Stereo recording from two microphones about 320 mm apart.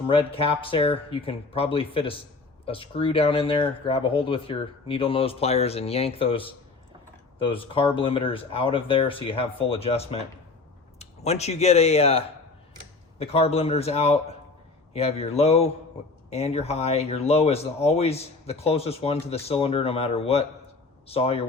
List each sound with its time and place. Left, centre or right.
0.1 s speech: centre